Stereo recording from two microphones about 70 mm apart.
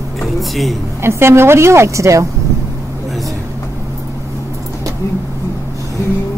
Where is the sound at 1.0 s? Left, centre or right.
Right.